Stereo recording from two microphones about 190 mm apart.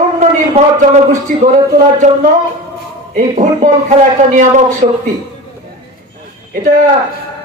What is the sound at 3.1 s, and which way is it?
A man's voice, 40° right (ahead or behind).